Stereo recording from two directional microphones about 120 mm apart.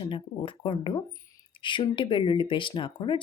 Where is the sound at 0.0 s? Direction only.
45° left (ahead or behind).